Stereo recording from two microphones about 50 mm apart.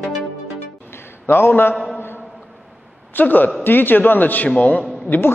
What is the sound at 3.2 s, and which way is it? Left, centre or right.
A man's voice, left.